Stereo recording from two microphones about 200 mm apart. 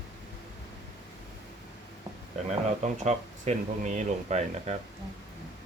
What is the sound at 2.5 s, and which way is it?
Speech, 35° right (ahead or behind).